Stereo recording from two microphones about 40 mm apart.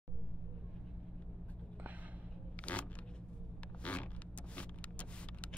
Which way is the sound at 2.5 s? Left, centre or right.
Left.